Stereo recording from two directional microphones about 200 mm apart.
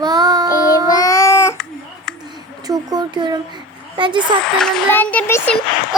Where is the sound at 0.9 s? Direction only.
15° left (ahead or behind).